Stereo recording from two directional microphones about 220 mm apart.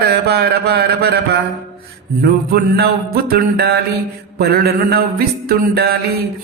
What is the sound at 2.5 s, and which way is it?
Speech, 45° right (ahead or behind).